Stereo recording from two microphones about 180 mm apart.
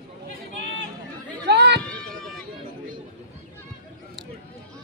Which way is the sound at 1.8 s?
5° left (ahead or behind).